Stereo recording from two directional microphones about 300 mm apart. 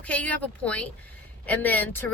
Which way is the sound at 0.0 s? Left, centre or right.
Centre.